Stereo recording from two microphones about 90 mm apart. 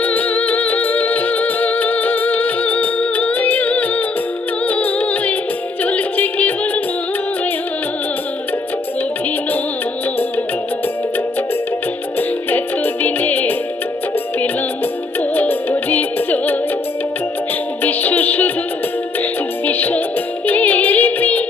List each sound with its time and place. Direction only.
0.0 s music: 15° left (ahead or behind)
12.5 s music: 20° left (ahead or behind)
15.4 s music: 20° left (ahead or behind)
17.8 s music: 20° left (ahead or behind)
19.6 s music: 20° left (ahead or behind)